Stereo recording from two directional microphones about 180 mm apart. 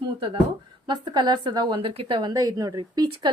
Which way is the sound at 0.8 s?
25° right (ahead or behind).